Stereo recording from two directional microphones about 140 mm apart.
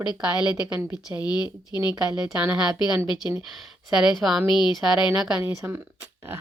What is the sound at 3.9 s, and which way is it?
Speech, 5° right (ahead or behind).